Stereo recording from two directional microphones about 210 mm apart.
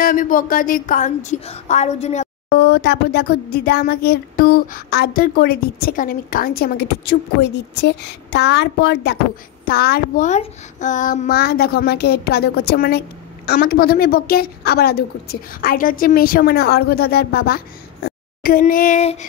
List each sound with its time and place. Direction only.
0.0 s a woman's voice: 40° left (ahead or behind)
2.5 s speech: 50° left (ahead or behind); by 19.2 s 35° left (ahead or behind)